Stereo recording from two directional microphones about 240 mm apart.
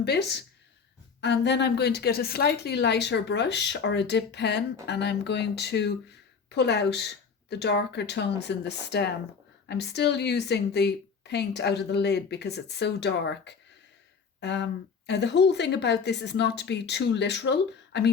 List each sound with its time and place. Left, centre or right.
0.0 s a woman's voice: left